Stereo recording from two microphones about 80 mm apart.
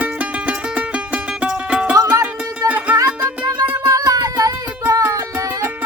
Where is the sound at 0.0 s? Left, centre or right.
Centre.